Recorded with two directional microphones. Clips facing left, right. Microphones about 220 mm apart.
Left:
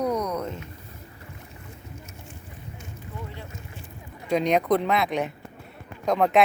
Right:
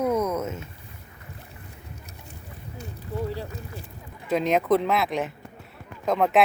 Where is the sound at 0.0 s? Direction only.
5° right (ahead or behind).